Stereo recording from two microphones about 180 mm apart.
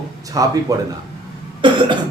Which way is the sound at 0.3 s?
20° right (ahead or behind).